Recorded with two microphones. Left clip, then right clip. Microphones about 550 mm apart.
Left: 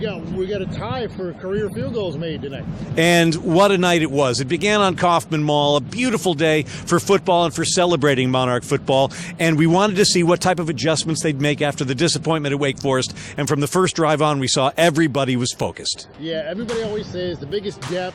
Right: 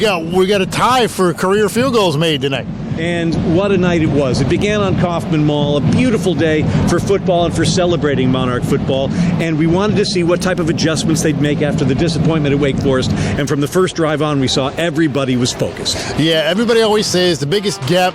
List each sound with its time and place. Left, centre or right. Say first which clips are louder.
0.0 s speech: right 12 dB; right
3.0 s speech: left 3 dB; left
16.2 s speech: right 12 dB; right